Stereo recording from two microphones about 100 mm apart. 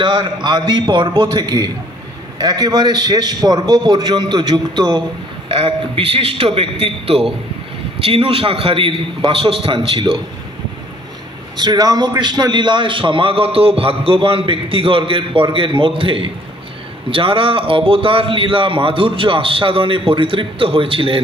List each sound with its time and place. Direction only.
0.0 s a man's voice: 50° right (ahead or behind)
5.5 s a man's voice: 65° right (ahead or behind)
11.5 s a man's voice: 45° right (ahead or behind); by 21.2 s 60° right (ahead or behind)